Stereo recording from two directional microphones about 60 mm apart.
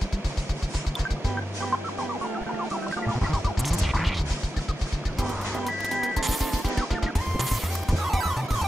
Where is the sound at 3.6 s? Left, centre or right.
Centre.